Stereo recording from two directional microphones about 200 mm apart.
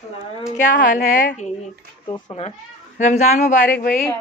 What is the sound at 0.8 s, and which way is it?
Speech, 40° left (ahead or behind).